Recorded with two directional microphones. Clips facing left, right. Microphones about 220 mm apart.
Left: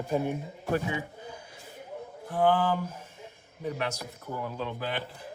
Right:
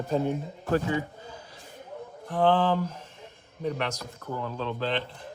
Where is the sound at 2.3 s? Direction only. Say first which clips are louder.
Right 2 dB; 10° left (ahead or behind).